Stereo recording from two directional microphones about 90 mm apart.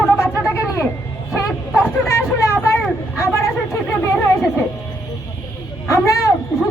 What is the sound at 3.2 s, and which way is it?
Chatter, 30° left (ahead or behind).